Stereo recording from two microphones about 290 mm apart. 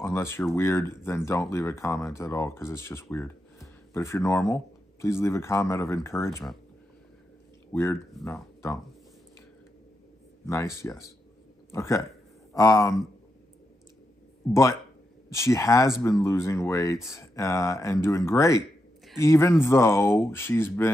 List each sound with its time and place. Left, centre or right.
0.0 s speech: centre
7.7 s speech: centre
10.4 s speech: centre
11.7 s speech: centre
14.5 s speech: centre